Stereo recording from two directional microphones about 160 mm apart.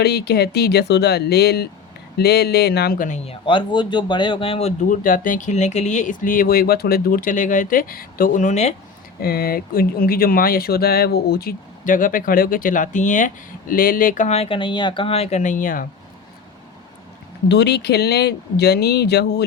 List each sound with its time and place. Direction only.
0.0 s speech: 90° left
3.4 s speech: 30° left (ahead or behind)
4.8 s speech: 60° left (ahead or behind)
9.2 s speech: 70° left (ahead or behind)
17.5 s speech: 90° left